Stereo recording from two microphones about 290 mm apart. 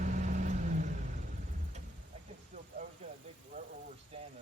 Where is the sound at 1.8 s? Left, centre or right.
Right.